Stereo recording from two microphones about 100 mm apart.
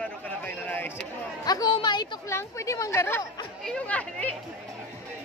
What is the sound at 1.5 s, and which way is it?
Speech, 40° left (ahead or behind).